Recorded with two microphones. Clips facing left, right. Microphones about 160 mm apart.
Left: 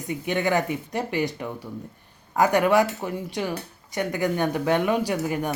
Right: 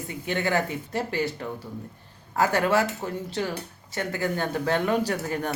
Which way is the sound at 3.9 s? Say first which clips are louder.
Left 3 dB; 15° left (ahead or behind).